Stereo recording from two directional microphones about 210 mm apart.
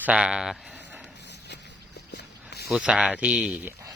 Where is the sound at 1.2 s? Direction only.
55° left (ahead or behind).